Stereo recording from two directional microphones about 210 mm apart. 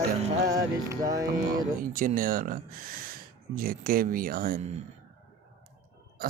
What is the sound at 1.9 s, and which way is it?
Speech, 40° right (ahead or behind).